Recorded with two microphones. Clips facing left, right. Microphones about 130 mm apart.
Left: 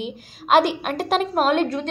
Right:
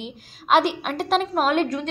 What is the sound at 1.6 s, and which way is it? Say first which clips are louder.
Speech: left 1 dB; 35° left (ahead or behind).